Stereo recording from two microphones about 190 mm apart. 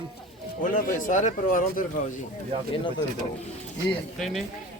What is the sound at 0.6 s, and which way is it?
Speech, 45° left (ahead or behind).